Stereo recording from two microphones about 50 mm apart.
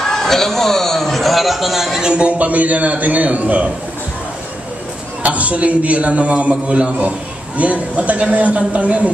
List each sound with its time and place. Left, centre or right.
0.0 s a man's voice: centre
2.0 s a man's voice: centre
5.2 s a man's voice: right